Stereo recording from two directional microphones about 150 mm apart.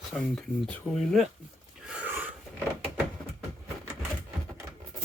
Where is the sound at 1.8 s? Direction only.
10° right (ahead or behind).